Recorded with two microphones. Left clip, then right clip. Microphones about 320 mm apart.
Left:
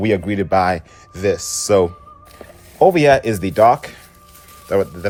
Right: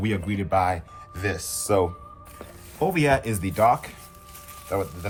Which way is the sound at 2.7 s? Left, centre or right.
Left.